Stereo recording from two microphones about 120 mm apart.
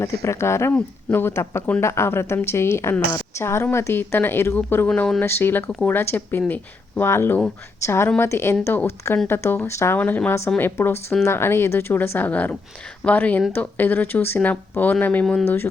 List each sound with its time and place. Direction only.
0.0 s speech: 25° left (ahead or behind)
4.9 s speech: 5° left (ahead or behind)
5.2 s speech: 20° left (ahead or behind)